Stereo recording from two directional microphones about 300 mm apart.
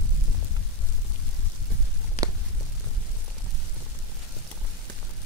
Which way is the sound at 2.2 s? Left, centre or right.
Left.